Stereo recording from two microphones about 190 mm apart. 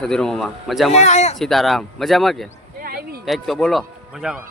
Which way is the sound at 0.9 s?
35° left (ahead or behind).